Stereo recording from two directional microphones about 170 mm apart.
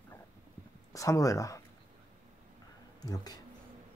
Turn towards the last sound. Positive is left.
turn(degrees=25)  # may be behind; listen again after turning